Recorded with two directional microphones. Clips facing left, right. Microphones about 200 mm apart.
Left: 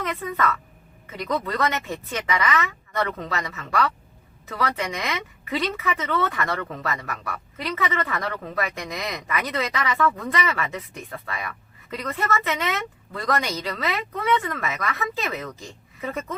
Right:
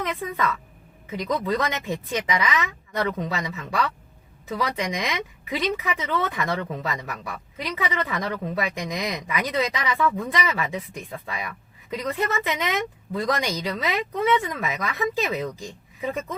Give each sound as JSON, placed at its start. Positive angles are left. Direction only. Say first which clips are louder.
{"t": 0.0, "sound": "a woman's voice", "louder": "left 1 dB", "side_deg": -15}